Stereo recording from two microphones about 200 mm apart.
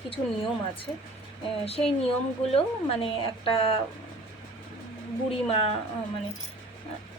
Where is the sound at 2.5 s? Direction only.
30° left (ahead or behind).